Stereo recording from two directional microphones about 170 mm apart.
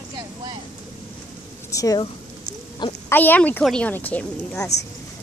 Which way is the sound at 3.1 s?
10° left (ahead or behind).